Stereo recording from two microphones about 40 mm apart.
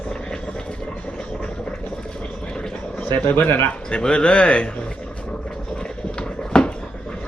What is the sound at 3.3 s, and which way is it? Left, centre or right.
Speech, left.